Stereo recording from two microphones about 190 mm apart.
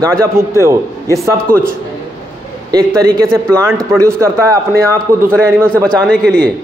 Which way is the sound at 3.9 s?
15° right (ahead or behind).